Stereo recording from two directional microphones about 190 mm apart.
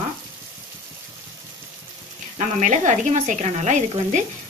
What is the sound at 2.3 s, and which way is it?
Speech, 40° right (ahead or behind).